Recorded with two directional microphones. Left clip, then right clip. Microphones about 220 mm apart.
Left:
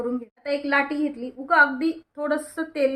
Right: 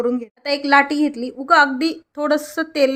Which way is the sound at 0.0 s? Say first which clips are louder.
Right 7 dB; 45° right (ahead or behind).